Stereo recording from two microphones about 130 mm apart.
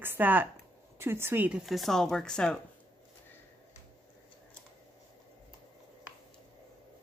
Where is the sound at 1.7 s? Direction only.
Centre (ahead or behind).